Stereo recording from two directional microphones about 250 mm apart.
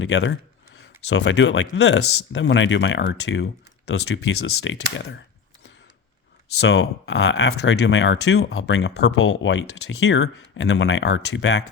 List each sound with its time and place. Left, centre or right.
0.0 s speech: left
6.6 s speech: left